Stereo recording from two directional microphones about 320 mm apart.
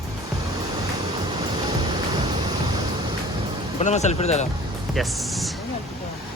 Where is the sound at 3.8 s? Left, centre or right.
Left.